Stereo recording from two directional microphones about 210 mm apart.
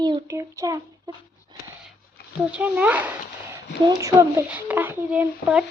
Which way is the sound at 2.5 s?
5° right (ahead or behind).